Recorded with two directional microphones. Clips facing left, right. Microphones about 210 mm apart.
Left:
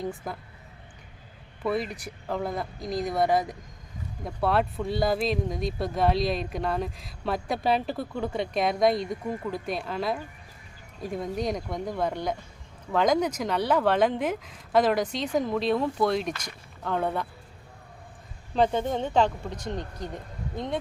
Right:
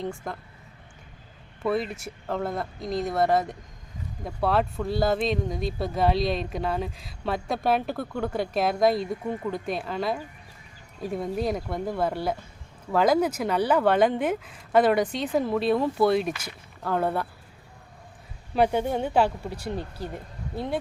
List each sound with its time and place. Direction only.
0.0 s speech: 5° left (ahead or behind)
1.6 s speech: centre (ahead or behind)
18.5 s speech: 10° right (ahead or behind)